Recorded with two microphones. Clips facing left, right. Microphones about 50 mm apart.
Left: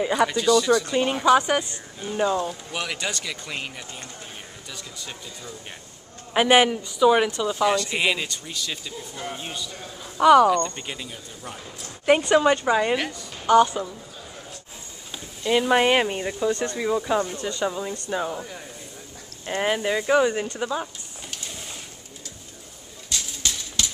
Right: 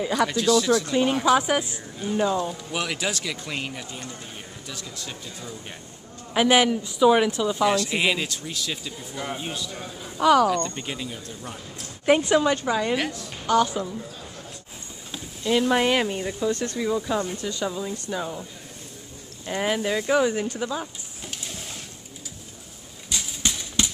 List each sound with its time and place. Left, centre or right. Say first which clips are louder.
0.0 s speech: left 1 dB; centre
6.3 s speech: left 1 dB; centre
6.8 s speech: even; centre
10.1 s speech: left 3 dB; centre
12.4 s speech: left 3 dB; centre
12.9 s speech: even; centre
15.4 s speech: left 2 dB; centre
17.3 s speech: left 1 dB; centre
17.6 s speech: left 1 dB; centre
19.6 s speech: left 1 dB; centre
21.3 s a sound: right 1 dB; centre
23.0 s a sound: right 1 dB; centre